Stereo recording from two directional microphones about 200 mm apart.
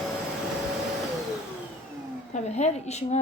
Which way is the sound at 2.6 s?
35° left (ahead or behind).